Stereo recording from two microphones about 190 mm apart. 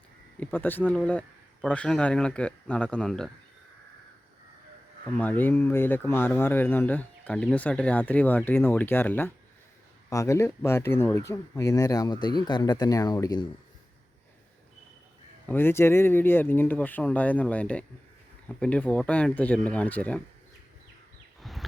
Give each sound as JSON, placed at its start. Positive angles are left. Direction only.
{"t": 0.3, "sound": "speech", "side_deg": 10}
{"t": 5.1, "sound": "speech", "side_deg": 10}
{"t": 15.4, "sound": "speech", "side_deg": 10}